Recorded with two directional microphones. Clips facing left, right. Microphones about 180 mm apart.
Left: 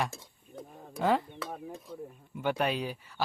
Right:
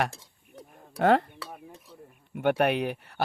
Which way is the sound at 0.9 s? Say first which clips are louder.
Right 6 dB; 65° right (ahead or behind).